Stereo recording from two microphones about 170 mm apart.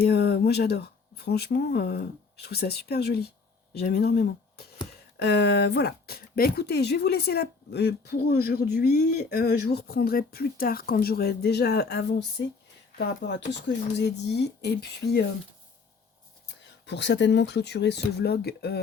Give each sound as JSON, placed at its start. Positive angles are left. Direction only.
{"t": 0.1, "sound": "speech", "side_deg": 70}
{"t": 5.2, "sound": "speech", "side_deg": 80}
{"t": 8.9, "sound": "speech", "side_deg": 50}
{"t": 9.3, "sound": "speech", "side_deg": 70}
{"t": 12.4, "sound": "speech", "side_deg": 90}
{"t": 16.8, "sound": "speech", "side_deg": 90}